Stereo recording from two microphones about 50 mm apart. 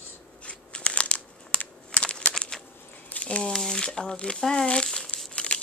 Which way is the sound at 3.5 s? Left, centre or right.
Centre.